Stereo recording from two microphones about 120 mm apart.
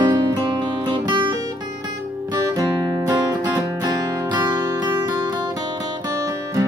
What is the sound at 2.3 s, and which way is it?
Music, 35° right (ahead or behind).